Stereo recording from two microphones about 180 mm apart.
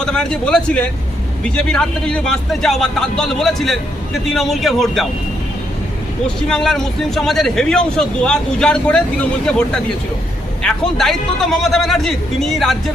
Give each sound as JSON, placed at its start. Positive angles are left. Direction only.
{"t": 0.0, "sound": "speech", "side_deg": 5}
{"t": 6.2, "sound": "speech", "side_deg": 5}